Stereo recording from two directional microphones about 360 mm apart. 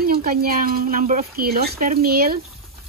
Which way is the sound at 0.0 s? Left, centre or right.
Right.